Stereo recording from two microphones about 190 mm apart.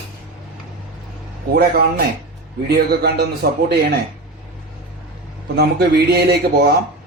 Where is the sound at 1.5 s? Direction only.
55° right (ahead or behind).